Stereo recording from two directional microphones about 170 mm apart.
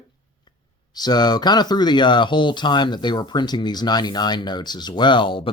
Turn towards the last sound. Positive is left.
turn(degrees=30)  # may be behind; listen again after turning